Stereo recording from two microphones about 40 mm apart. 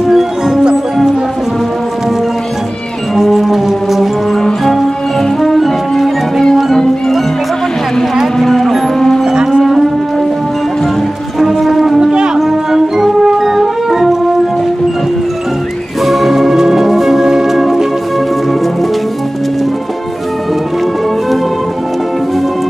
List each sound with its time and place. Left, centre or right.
0.0 s music: centre
3.2 s music: centre
5.4 s music: centre
6.5 s music: centre
8.4 s music: centre
9.2 s music: centre
9.6 s music: centre
11.3 s music: centre
12.0 s foghorn: centre
12.4 s music: centre
16.0 s music: centre